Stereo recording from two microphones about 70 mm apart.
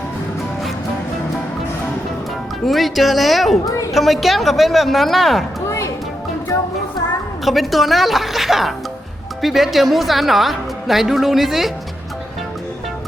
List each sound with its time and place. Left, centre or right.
2.6 s a woman's voice: centre
5.6 s music: left
7.4 s a woman's voice: centre